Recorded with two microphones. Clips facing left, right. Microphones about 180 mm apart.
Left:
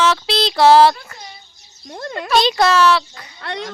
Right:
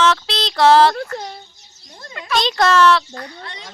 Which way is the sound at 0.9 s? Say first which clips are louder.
Right 12 dB; 75° right (ahead or behind).